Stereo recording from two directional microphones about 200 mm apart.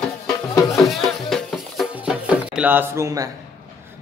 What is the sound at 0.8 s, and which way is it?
Music, centre (ahead or behind).